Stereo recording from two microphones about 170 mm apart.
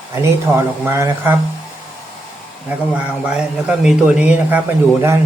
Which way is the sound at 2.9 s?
5° right (ahead or behind).